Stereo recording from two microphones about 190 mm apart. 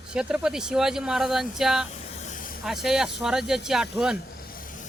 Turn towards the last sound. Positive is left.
turn(degrees=45)  # may be behind; listen again after turning